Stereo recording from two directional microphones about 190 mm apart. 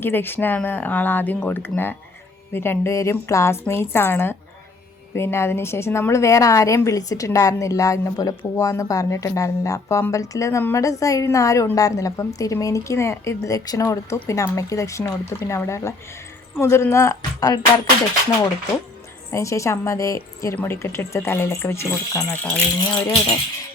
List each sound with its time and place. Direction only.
0.0 s a woman's voice: 10° left (ahead or behind)
19.3 s a woman's voice: 15° left (ahead or behind)